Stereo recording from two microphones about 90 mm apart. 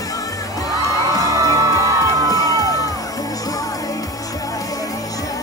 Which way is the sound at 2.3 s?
40° left (ahead or behind).